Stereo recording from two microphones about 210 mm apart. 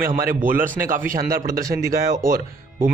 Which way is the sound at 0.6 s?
40° right (ahead or behind).